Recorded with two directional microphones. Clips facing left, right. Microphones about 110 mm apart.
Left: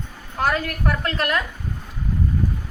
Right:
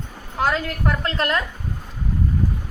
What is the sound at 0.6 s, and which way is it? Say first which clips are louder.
Speech: even; 25° right (ahead or behind).